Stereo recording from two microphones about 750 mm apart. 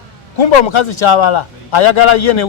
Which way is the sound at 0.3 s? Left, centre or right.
Left.